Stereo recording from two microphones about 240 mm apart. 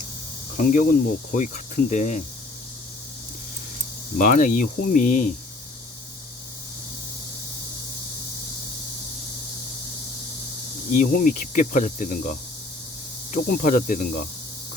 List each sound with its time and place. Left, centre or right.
0.5 s speech: left
4.2 s speech: left
10.9 s speech: left